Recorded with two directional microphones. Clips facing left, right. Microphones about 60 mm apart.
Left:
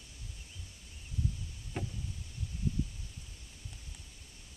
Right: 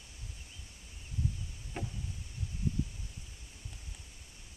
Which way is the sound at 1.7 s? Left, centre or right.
Centre.